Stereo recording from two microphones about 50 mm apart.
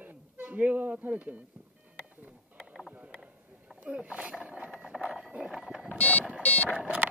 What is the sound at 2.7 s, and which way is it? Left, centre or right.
Boat, centre.